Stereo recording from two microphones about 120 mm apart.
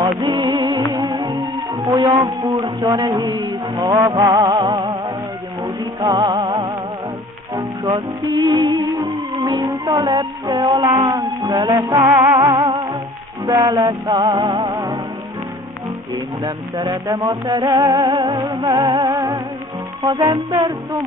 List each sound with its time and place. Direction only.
0.2 s music: 40° right (ahead or behind)
2.2 s speech: 35° right (ahead or behind)
5.9 s music: 35° right (ahead or behind)
7.5 s music: centre (ahead or behind)
8.2 s music: 35° right (ahead or behind)
16.4 s music: 30° right (ahead or behind)